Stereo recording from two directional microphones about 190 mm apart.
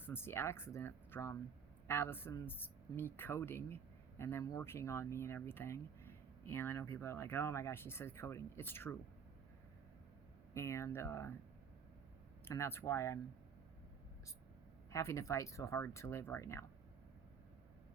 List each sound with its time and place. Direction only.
0.0 s speech: 10° left (ahead or behind)
10.5 s speech: 15° left (ahead or behind)
12.5 s speech: 10° left (ahead or behind)
14.8 s speech: 15° left (ahead or behind)